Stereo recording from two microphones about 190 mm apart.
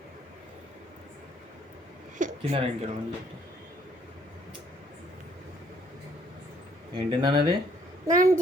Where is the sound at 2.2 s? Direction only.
40° right (ahead or behind).